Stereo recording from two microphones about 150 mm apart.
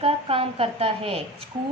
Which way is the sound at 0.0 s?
40° right (ahead or behind).